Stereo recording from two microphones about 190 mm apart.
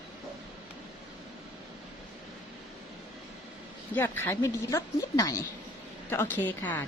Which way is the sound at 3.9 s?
10° left (ahead or behind).